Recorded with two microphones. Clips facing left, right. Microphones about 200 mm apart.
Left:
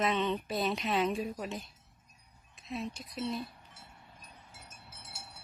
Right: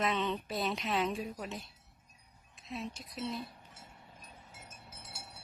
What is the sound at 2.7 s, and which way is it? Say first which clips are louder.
Speech: left 3 dB; centre (ahead or behind).